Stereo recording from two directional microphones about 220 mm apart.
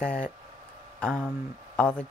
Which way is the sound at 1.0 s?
5° left (ahead or behind).